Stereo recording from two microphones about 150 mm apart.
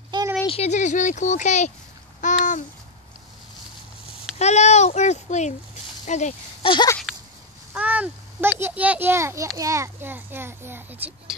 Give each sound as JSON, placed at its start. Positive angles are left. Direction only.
{"t": 0.5, "sound": "speech", "side_deg": 45}
{"t": 2.2, "sound": "babbling", "side_deg": 55}
{"t": 4.0, "sound": "speech", "side_deg": 50}
{"t": 6.6, "sound": "a sound", "side_deg": 35}
{"t": 7.1, "sound": "a sound", "side_deg": -5}
{"t": 7.7, "sound": "a child's voice", "side_deg": -10}